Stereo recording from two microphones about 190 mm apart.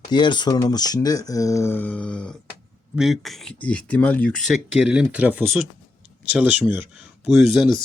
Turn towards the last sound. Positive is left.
turn(degrees=0)  # may be behind; listen again after turning